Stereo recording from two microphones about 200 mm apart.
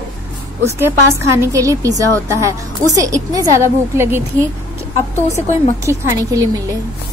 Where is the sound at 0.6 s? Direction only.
10° right (ahead or behind).